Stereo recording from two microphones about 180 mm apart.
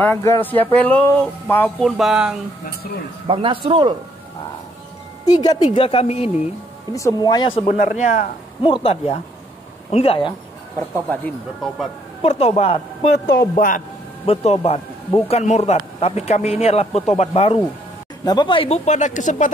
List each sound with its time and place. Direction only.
0.0 s speech: 15° left (ahead or behind)
1.9 s speech: centre (ahead or behind)
3.3 s speech: 30° right (ahead or behind)
5.2 s speech: 20° left (ahead or behind)
6.9 s speech: 20° left (ahead or behind)
7.6 s speech: 40° left (ahead or behind)
8.6 s speech: 30° left (ahead or behind)
11.1 s speech: 5° left (ahead or behind)
12.2 s speech: 35° left (ahead or behind)
13.1 s a man's voice: 60° left (ahead or behind)
14.2 s speech: 35° left (ahead or behind)
18.2 s speech: 25° left (ahead or behind); by 19.5 s 45° left (ahead or behind)